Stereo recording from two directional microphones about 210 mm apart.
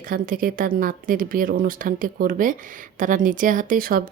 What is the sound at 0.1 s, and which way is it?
A woman's voice, 45° right (ahead or behind).